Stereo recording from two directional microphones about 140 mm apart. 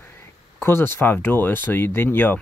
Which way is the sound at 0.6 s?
15° left (ahead or behind).